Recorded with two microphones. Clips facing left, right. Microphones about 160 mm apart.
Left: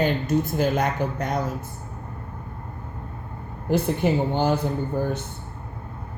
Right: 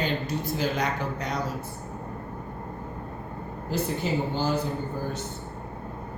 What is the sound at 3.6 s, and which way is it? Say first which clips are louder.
Speech: left 7 dB; 60° left (ahead or behind).